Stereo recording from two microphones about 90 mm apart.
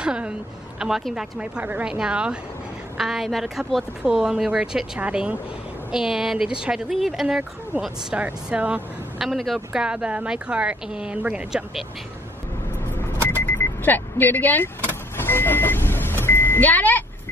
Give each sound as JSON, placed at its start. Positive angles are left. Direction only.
{"t": 0.0, "sound": "a woman's voice", "side_deg": -10}
{"t": 9.2, "sound": "speech", "side_deg": 0}
{"t": 9.7, "sound": "speech", "side_deg": -10}
{"t": 13.8, "sound": "speech", "side_deg": 20}
{"t": 15.1, "sound": "vehicle", "side_deg": 25}